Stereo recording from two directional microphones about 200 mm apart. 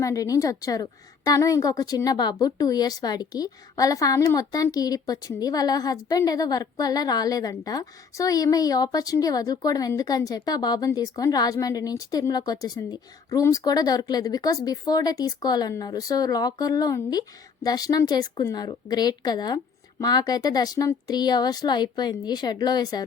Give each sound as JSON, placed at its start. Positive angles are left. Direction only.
{"t": 0.0, "sound": "a woman's voice", "side_deg": 15}